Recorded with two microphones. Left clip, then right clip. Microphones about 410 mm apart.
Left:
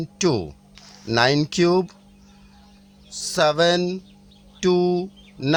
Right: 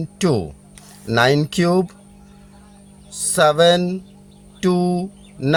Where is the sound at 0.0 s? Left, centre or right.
Left.